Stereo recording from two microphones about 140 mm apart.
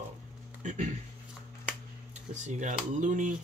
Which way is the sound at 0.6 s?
60° right (ahead or behind).